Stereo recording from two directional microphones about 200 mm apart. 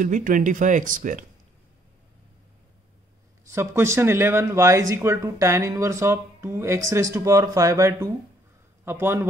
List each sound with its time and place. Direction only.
0.0 s speech: 40° right (ahead or behind)
3.4 s speech: 15° right (ahead or behind)